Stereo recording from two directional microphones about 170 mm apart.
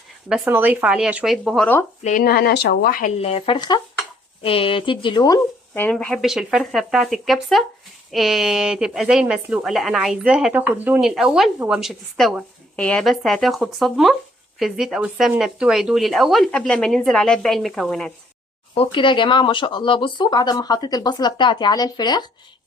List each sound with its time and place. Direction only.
0.3 s a woman's voice: 5° right (ahead or behind)
2.0 s speech: 55° left (ahead or behind)
3.2 s speech: 35° left (ahead or behind)
5.7 s a woman's voice: 10° left (ahead or behind)
18.7 s speech: 30° left (ahead or behind)